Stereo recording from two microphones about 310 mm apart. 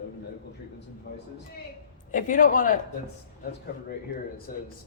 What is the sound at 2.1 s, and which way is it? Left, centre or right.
Speech, left.